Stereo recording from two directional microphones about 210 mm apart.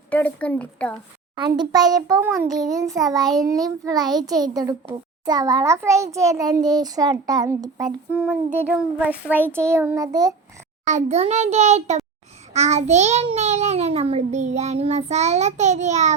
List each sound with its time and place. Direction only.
0.1 s speech: 5° left (ahead or behind)
1.4 s a child's voice: 20° right (ahead or behind)
8.1 s child singing: 5° right (ahead or behind)
8.7 s a child's voice: 5° right (ahead or behind)
10.8 s a child's voice: 35° right (ahead or behind)